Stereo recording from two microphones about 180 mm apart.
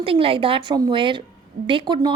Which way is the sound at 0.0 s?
30° right (ahead or behind).